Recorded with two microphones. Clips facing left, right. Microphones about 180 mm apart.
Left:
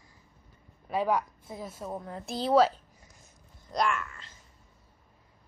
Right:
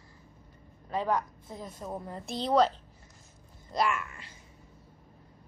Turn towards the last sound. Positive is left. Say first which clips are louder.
# even
turn(degrees=-5)  # may be behind; listen again after turning